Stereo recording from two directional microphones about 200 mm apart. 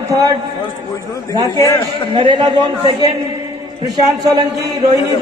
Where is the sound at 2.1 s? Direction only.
25° right (ahead or behind).